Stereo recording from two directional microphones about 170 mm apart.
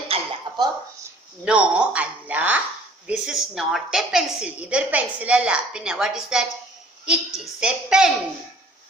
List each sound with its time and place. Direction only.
0.1 s cough: 25° right (ahead or behind)
1.5 s a woman's voice: 5° right (ahead or behind)